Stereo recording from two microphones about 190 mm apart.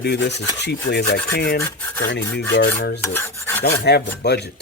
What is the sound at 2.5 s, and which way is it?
Filing, 65° left (ahead or behind).